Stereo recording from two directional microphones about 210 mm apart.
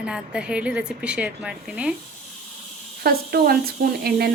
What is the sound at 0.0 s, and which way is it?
A woman's voice, 5° right (ahead or behind).